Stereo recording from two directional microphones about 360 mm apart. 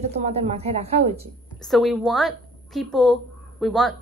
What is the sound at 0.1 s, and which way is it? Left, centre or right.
A woman's voice, centre.